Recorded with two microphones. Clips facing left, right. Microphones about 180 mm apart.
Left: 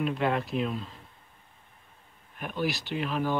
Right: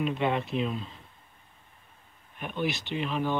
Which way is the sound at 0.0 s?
Centre (ahead or behind).